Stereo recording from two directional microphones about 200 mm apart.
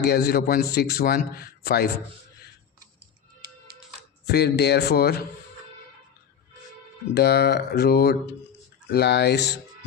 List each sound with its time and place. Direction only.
0.0 s a man's voice: 55° left (ahead or behind)
4.3 s speech: 55° left (ahead or behind)
7.1 s speech: 55° left (ahead or behind)